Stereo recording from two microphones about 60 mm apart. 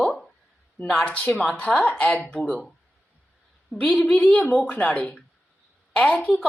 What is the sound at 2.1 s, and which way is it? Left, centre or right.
Speech, centre.